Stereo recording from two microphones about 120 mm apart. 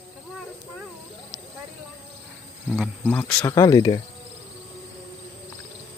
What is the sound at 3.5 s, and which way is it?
Speech, 35° left (ahead or behind).